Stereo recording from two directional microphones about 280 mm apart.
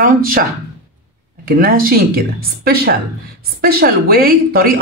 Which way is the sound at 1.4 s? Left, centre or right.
Right.